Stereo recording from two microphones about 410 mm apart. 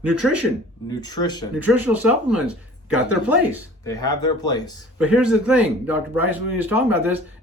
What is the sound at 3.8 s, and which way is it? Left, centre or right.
Speech, centre.